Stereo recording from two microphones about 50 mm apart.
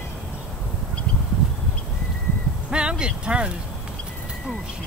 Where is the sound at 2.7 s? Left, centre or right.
Centre.